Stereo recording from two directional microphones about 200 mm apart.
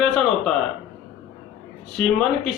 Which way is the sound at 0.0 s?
Centre (ahead or behind).